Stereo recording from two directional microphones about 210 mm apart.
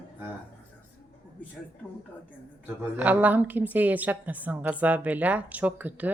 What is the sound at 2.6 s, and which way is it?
A woman's voice, 5° right (ahead or behind).